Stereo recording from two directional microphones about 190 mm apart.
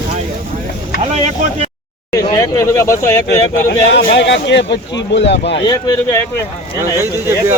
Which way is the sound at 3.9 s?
65° left (ahead or behind).